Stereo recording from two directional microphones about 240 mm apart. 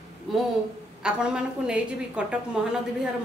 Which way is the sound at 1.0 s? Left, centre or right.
Centre.